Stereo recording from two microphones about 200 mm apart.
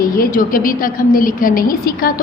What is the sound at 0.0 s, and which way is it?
A woman's voice, 45° left (ahead or behind).